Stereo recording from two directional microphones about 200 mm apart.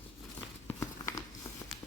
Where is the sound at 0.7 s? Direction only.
15° left (ahead or behind).